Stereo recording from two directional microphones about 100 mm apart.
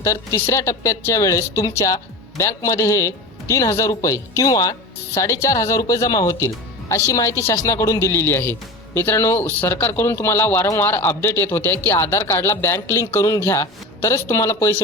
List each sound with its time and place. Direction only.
0.0 s speech: 30° left (ahead or behind)